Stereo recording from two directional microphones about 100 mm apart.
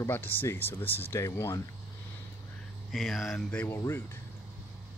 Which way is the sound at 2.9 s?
Centre (ahead or behind).